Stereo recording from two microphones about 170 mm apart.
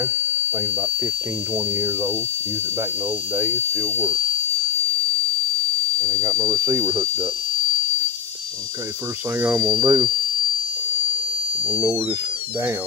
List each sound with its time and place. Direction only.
3.3 s speech: 15° right (ahead or behind)
5.9 s speech: 20° right (ahead or behind)
9.4 s speech: 10° right (ahead or behind)
9.8 s speech: 25° right (ahead or behind)
11.6 s speech: 10° right (ahead or behind)